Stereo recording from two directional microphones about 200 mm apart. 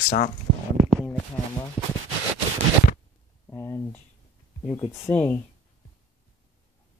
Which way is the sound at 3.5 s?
10° left (ahead or behind).